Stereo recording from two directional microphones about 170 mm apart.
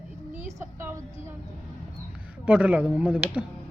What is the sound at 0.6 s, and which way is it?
Speech, 15° right (ahead or behind).